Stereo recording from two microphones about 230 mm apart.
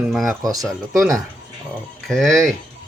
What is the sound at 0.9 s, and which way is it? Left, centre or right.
Speech, centre.